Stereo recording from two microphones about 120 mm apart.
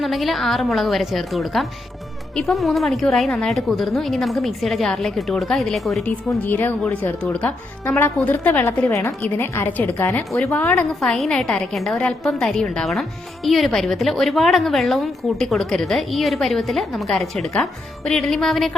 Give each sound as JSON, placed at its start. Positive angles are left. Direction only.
{"t": 0.0, "sound": "a woman's voice", "side_deg": 0}
{"t": 6.1, "sound": "a woman's voice", "side_deg": 15}
{"t": 11.0, "sound": "a woman's voice", "side_deg": 5}